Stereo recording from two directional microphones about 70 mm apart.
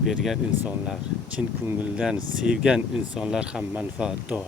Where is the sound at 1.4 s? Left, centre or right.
Right.